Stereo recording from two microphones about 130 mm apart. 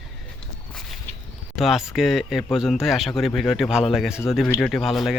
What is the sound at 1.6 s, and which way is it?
A man's voice, centre (ahead or behind).